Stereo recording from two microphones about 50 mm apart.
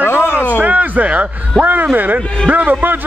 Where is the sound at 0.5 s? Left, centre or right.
Right.